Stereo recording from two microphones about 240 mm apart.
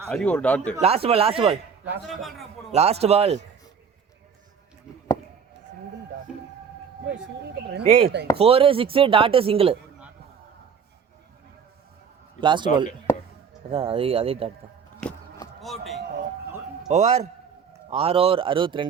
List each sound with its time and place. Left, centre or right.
0.1 s a man's voice: centre
0.8 s speech: right
1.8 s a man's voice: centre
2.7 s speech: right
4.9 s a sound: centre
7.4 s speech: right
7.9 s speech: right
12.4 s speech: centre
13.1 s a sound: centre
13.7 s speech: right
15.0 s a sound: centre
16.9 s speech: right